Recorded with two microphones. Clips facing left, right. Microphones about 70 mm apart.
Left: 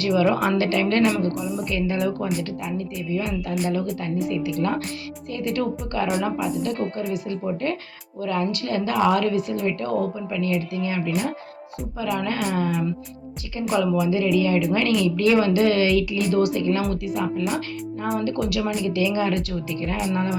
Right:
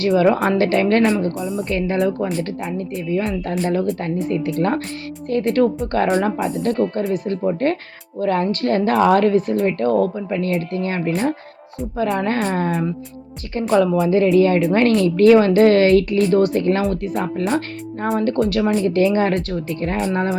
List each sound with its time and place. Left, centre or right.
0.1 s a woman's voice: right
1.4 s speech: centre
1.6 s a woman's voice: right